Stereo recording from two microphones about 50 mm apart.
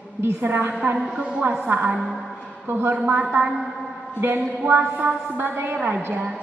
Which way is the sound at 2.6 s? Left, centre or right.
Right.